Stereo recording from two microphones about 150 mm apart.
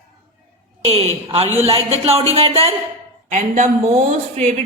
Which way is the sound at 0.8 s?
45° right (ahead or behind).